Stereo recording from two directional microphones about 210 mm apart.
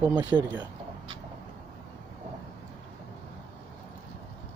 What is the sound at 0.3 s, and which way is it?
Speech, 5° right (ahead or behind).